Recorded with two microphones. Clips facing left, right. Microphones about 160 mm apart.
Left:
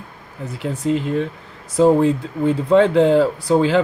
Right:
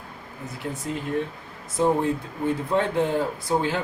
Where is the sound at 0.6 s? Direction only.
90° left.